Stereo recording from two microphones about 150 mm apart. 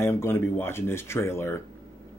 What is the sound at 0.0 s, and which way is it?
Speech, 15° left (ahead or behind).